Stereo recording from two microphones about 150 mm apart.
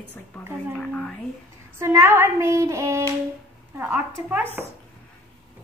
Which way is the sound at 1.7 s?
15° right (ahead or behind).